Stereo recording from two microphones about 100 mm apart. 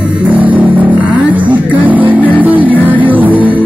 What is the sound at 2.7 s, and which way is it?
Music, 15° left (ahead or behind).